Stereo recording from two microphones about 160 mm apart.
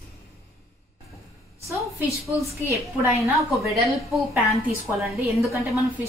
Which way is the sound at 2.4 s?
15° right (ahead or behind).